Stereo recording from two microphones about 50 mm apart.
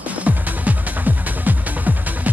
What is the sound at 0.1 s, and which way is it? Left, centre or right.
Music, right.